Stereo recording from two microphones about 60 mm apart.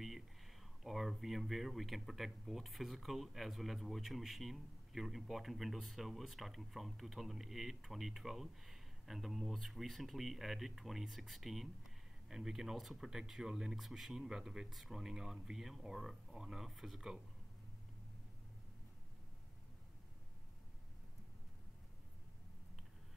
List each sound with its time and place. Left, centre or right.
0.8 s speech: centre